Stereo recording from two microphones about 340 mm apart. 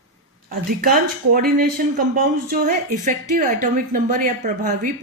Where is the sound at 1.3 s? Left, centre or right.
Right.